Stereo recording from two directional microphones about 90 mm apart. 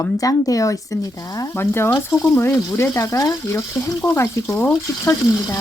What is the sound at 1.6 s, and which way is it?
Frying, 25° left (ahead or behind).